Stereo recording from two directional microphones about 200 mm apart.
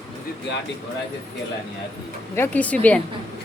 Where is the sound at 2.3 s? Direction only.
10° left (ahead or behind).